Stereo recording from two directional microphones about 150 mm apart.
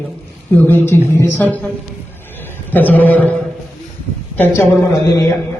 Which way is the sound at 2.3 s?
10° left (ahead or behind).